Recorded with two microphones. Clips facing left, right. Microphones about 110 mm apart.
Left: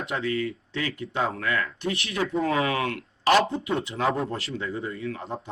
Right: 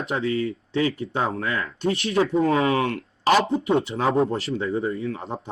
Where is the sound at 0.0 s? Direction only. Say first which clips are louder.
Right 3 dB; 30° right (ahead or behind).